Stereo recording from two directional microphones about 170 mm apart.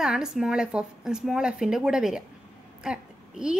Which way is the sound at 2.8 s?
5° right (ahead or behind).